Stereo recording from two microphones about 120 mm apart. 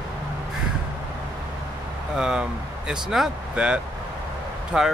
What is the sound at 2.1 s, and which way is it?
Speech, 5° right (ahead or behind).